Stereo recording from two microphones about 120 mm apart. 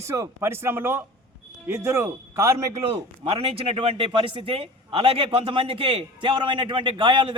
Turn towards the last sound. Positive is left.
turn(degrees=-45)  # may be behind; listen again after turning